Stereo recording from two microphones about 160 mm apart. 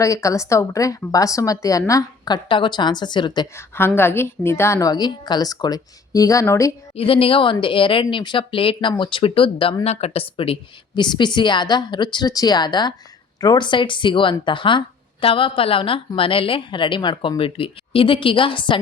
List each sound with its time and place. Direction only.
0.0 s a woman's voice: 20° left (ahead or behind)
3.8 s a woman's voice: 15° left (ahead or behind)
6.9 s a woman's voice: 35° left (ahead or behind)